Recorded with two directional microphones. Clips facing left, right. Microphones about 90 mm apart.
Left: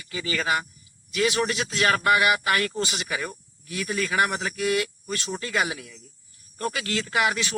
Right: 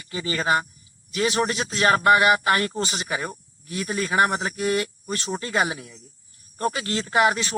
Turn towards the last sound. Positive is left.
turn(degrees=-35)  # may be behind; listen again after turning